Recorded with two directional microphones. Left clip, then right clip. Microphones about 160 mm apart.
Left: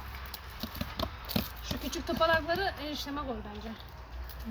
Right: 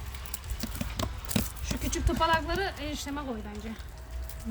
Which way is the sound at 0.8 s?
30° right (ahead or behind).